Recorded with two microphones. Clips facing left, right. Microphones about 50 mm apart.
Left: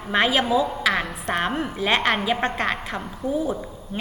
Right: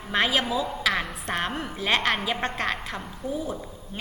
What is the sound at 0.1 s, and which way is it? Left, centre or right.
A woman's voice, centre.